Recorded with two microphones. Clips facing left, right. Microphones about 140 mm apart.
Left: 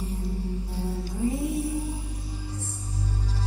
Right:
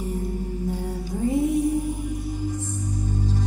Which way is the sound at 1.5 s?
15° right (ahead or behind).